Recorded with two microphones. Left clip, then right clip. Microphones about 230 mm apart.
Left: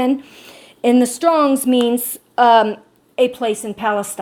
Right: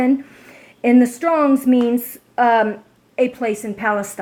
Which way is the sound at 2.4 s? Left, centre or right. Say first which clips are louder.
Left 3 dB; left.